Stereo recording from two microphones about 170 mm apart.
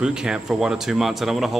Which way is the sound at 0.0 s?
5° right (ahead or behind).